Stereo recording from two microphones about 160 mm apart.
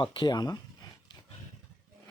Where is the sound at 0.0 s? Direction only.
30° left (ahead or behind).